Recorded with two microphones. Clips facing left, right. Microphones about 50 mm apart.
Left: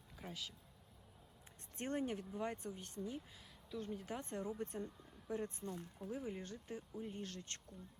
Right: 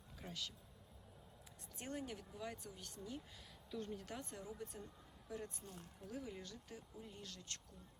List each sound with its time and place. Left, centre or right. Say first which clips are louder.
0.2 s a sound: left 1 dB; centre
1.8 s speech: left 7 dB; left
3.7 s speech: left 2 dB; centre
4.2 s speech: left 6 dB; left